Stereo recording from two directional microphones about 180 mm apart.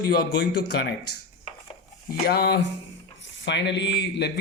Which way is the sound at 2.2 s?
65° left (ahead or behind).